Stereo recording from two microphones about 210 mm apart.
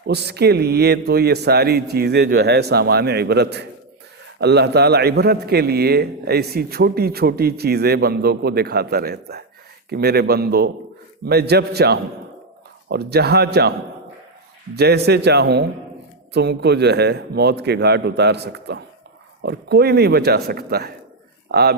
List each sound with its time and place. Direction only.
0.1 s a man's voice: 50° right (ahead or behind)
14.8 s a man's voice: 50° right (ahead or behind)